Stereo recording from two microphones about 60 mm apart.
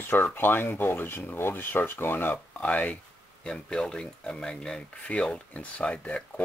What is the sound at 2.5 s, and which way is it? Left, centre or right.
Speech, left.